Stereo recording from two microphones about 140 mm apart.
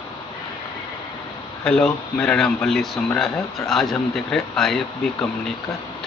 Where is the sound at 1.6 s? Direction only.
5° left (ahead or behind).